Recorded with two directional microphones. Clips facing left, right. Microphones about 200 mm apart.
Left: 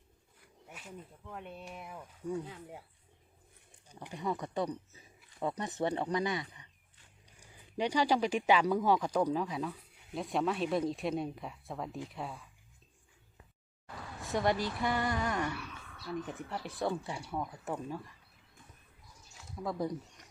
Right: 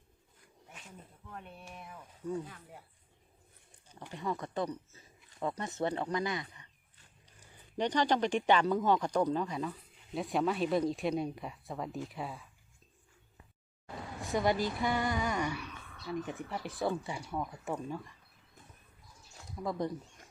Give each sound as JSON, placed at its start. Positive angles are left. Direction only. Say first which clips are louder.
{"t": 1.5, "sound": "speech", "louder": "left 3 dB", "side_deg": 15}
{"t": 3.8, "sound": "speech", "louder": "left 1 dB", "side_deg": 15}
{"t": 14.2, "sound": "speech", "louder": "right 1 dB", "side_deg": 0}
{"t": 19.5, "sound": "speech", "louder": "even", "side_deg": 0}